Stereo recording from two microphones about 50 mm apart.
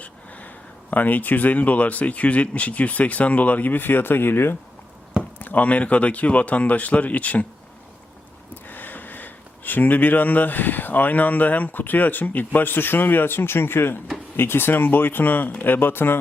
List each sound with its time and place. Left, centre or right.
0.0 s speech: left
5.4 s speech: left
8.6 s speech: left